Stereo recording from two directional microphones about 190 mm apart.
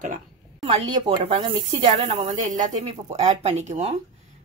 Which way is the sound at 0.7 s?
30° right (ahead or behind).